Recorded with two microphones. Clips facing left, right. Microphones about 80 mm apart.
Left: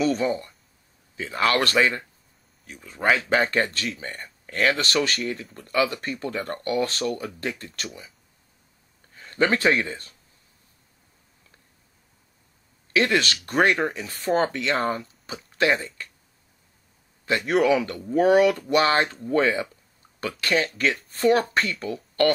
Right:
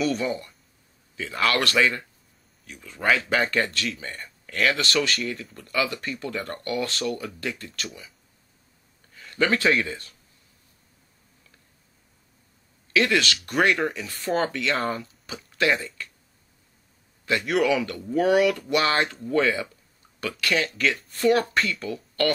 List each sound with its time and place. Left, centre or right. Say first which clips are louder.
0.0 s speech: left 2 dB; left
7.7 s speech: even; left
9.1 s a sound: left 1 dB; left
9.8 s speech: even; left
12.9 s speech: even; left
14.8 s speech: left 2 dB; centre
15.5 s speech: left 1 dB; left
17.3 s speech: left 2 dB; left